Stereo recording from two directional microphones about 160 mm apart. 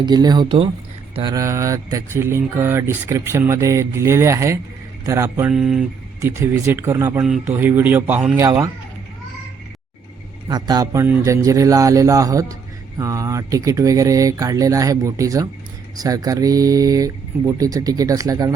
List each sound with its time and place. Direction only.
0.0 s speech: 25° right (ahead or behind)
5.5 s speech: centre (ahead or behind)
6.1 s speech: 15° right (ahead or behind)
10.5 s speech: 25° right (ahead or behind)